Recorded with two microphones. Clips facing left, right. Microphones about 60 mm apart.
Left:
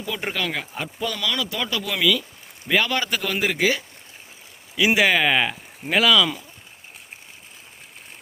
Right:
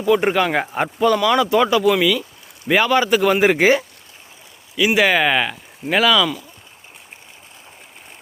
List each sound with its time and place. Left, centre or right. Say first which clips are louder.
0.0 s speech: right 11 dB; right
0.7 s speech: right 12 dB; right; by 3.2 s centre
3.2 s speech: right 8 dB; right
4.9 s speech: right 4 dB; centre